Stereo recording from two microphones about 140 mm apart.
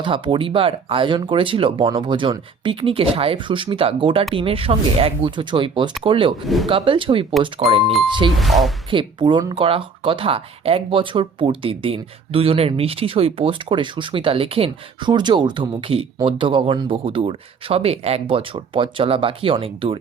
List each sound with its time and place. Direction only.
0.0 s speech: 40° right (ahead or behind)
8.4 s speech: centre (ahead or behind)
8.9 s speech: 35° right (ahead or behind)